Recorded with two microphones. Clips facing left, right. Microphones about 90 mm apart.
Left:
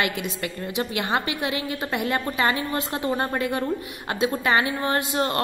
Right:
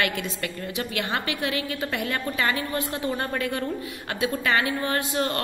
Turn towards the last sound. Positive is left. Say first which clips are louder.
# left 2 dB
turn(degrees=25)  # may be behind; listen again after turning